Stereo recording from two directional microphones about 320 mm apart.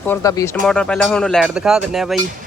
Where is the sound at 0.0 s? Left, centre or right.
Centre.